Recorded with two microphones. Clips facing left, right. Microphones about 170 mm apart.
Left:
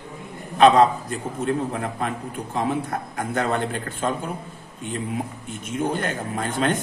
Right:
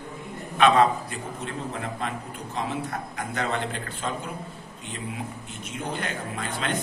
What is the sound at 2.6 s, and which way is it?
A man's voice, 50° left (ahead or behind).